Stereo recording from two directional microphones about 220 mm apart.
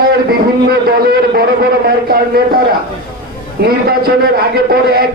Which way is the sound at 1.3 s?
45° right (ahead or behind).